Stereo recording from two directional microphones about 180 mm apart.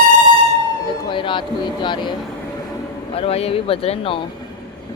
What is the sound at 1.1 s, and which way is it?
Speech, 25° left (ahead or behind).